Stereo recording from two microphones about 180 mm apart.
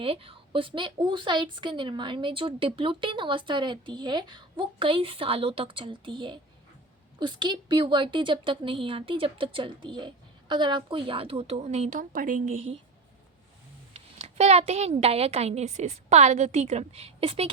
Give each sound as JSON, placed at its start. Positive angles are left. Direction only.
{"t": 0.0, "sound": "a woman's voice", "side_deg": -30}
{"t": 13.9, "sound": "a woman's voice", "side_deg": -35}